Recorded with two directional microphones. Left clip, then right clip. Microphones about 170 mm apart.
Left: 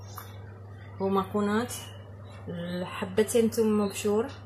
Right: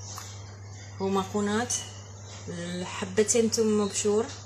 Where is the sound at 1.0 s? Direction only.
5° right (ahead or behind).